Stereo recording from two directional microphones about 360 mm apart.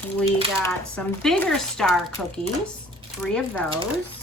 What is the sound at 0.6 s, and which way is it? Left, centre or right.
Speech, centre.